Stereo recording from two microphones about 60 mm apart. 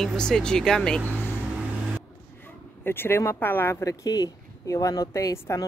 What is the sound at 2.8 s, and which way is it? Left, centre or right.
Speech, left.